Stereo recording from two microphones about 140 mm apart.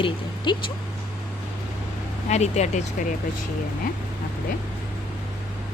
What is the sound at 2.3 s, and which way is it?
Speech, 55° left (ahead or behind).